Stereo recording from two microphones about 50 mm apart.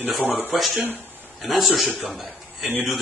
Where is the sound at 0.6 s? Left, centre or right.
Centre.